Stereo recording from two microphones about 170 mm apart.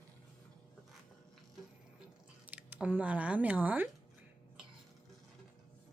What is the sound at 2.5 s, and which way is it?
Speech, 10° right (ahead or behind).